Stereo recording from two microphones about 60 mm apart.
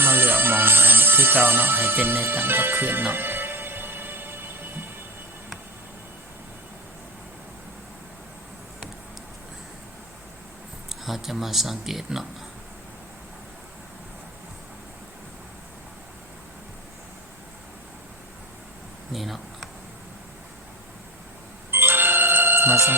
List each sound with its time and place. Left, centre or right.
0.0 s music: right
10.8 s speech: centre
19.1 s a sound: centre
21.7 s music: right